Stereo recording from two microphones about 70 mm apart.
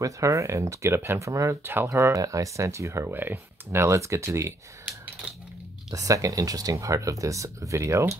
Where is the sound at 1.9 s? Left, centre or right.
Right.